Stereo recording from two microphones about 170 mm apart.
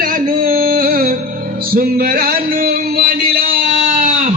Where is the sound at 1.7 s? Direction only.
60° right (ahead or behind).